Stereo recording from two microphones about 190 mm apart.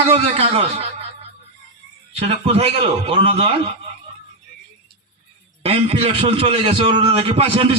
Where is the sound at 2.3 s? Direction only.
30° right (ahead or behind).